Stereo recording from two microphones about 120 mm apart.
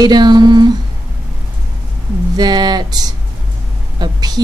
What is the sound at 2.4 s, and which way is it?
Speech, 35° right (ahead or behind).